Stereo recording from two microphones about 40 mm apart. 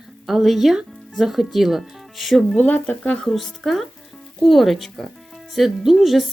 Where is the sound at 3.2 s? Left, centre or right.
Centre.